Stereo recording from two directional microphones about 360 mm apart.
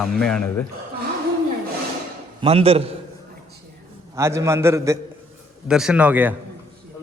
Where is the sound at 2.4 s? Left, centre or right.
Centre.